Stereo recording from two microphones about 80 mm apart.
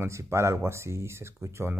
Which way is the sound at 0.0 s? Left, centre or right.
Right.